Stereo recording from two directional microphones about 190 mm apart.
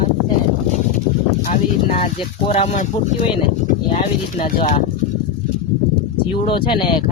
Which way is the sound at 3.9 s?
30° left (ahead or behind).